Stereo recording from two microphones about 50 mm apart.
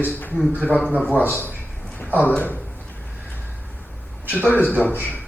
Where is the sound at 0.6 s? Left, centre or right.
Left.